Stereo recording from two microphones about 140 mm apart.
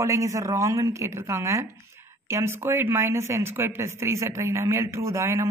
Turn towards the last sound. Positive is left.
turn(degrees=-20)  # may be behind; listen again after turning